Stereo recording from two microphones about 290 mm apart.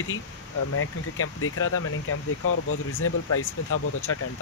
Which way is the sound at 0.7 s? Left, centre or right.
Left.